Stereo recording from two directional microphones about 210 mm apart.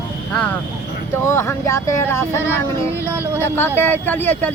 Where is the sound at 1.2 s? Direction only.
10° left (ahead or behind).